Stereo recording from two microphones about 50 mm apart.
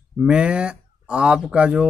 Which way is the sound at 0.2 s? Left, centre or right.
Centre.